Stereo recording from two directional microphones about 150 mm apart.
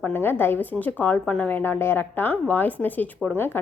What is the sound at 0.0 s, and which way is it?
Speech, 15° left (ahead or behind).